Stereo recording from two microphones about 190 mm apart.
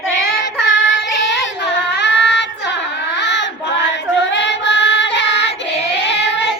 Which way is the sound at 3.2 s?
70° left (ahead or behind).